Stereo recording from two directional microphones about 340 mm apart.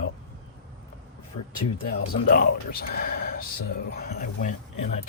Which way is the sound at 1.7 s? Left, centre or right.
Left.